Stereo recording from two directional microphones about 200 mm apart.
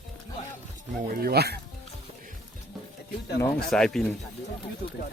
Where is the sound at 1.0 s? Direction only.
45° right (ahead or behind).